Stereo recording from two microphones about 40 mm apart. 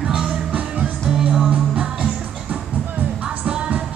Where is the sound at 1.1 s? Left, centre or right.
Centre.